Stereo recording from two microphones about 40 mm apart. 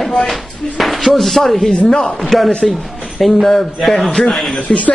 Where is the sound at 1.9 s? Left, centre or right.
Left.